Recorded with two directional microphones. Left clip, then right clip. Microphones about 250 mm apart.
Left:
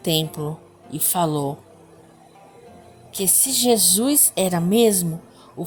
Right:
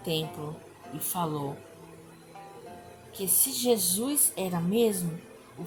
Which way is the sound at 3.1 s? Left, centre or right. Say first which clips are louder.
Left 10 dB; left.